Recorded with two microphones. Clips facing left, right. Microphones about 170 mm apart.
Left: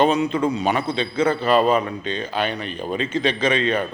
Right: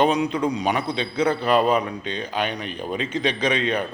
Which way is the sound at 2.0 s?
15° right (ahead or behind).